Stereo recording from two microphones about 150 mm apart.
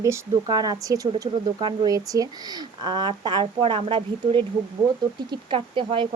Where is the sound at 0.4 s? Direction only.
25° right (ahead or behind).